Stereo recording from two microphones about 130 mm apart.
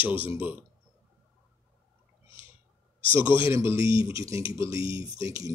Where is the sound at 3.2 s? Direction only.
40° left (ahead or behind).